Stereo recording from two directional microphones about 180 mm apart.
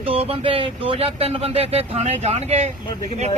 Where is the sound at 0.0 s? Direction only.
30° right (ahead or behind).